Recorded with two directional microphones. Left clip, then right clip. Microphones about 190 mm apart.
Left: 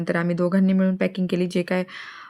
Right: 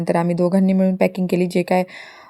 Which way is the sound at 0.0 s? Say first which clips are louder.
Right 5 dB; 10° right (ahead or behind).